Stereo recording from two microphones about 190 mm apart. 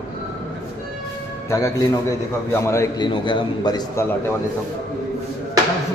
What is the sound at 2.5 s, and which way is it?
A man's voice, 15° left (ahead or behind).